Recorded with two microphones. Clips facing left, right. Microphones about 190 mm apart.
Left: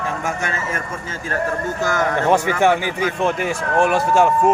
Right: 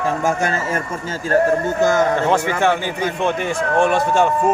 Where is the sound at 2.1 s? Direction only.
15° left (ahead or behind).